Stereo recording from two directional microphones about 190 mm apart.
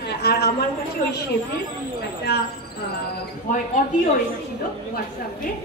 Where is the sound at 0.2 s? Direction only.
60° left (ahead or behind).